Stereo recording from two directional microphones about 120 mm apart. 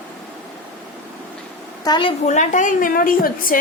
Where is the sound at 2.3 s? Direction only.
85° left.